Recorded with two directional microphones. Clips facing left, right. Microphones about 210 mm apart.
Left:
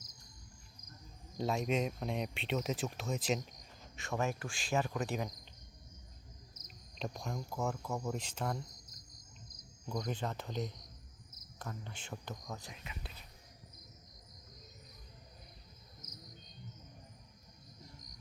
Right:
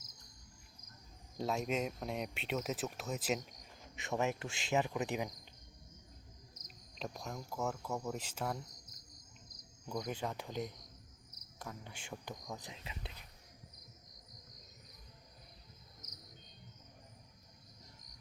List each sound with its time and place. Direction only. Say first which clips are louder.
1.4 s speech: left 2 dB; centre (ahead or behind)
3.9 s speech: right 1 dB; 20° right (ahead or behind)
6.9 s speech: left 3 dB; centre (ahead or behind)
9.9 s speech: left 1 dB; 10° right (ahead or behind); by 13.1 s 25° right (ahead or behind)